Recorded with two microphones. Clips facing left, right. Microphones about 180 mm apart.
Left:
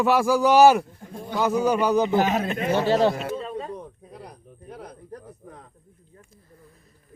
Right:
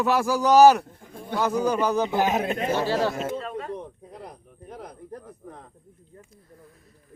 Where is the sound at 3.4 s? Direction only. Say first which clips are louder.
Left 1 dB; 15° left (ahead or behind).